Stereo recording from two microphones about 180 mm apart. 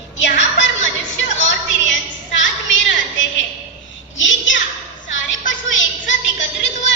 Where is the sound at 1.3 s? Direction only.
90° left.